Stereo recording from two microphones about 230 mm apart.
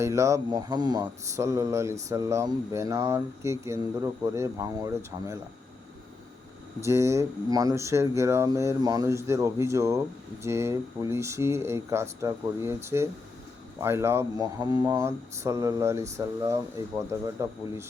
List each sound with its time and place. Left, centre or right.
0.0 s speech: centre
6.8 s speech: centre